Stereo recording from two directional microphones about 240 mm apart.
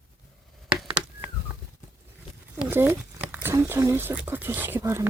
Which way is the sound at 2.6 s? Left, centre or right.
Centre.